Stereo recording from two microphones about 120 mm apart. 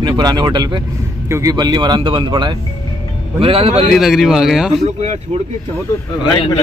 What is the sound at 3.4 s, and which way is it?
Speech, 50° right (ahead or behind).